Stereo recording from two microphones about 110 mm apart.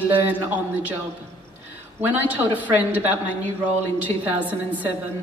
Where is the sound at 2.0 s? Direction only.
15° right (ahead or behind).